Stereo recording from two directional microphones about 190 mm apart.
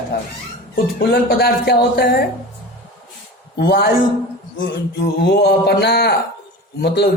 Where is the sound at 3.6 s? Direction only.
55° left (ahead or behind).